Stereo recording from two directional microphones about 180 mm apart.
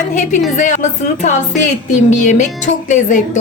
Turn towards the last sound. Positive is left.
turn(degrees=45)  # may be behind; listen again after turning